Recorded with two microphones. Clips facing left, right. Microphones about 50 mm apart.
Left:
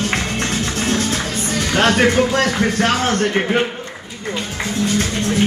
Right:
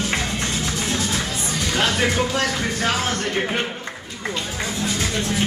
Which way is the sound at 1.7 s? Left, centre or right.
Left.